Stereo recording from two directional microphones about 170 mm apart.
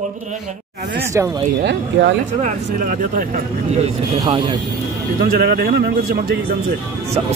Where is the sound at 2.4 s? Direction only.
45° right (ahead or behind).